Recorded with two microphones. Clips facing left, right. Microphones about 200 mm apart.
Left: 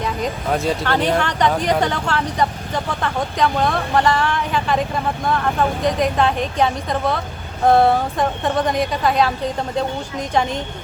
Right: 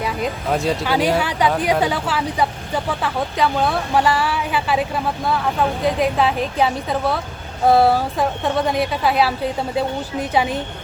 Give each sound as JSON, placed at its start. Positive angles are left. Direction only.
{"t": 0.0, "sound": "speech", "side_deg": -5}